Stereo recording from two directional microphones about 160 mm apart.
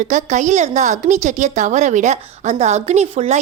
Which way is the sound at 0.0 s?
50° right (ahead or behind).